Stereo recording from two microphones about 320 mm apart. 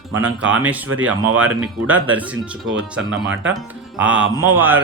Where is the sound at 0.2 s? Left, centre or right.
Right.